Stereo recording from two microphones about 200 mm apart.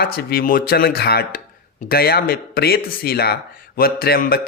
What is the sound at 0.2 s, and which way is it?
Speech, 50° left (ahead or behind).